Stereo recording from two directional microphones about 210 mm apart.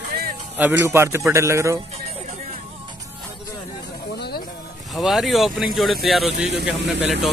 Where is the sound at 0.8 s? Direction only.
10° right (ahead or behind).